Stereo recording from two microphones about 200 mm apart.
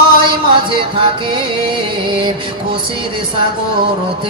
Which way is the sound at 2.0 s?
25° right (ahead or behind).